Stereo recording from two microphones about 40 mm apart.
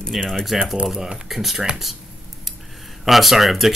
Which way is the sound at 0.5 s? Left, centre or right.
Centre.